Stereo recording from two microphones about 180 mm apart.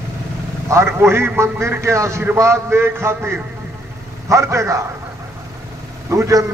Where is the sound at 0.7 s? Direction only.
15° right (ahead or behind).